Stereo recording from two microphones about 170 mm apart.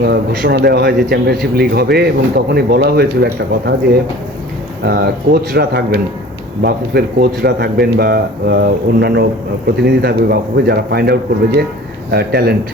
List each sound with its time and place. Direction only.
0.0 s a man's voice: 65° right (ahead or behind)
4.9 s a man's voice: 70° right (ahead or behind)